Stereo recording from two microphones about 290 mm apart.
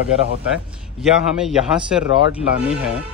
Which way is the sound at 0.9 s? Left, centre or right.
Centre.